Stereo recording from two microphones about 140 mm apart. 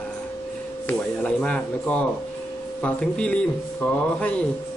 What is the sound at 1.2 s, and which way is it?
Speech, 5° left (ahead or behind).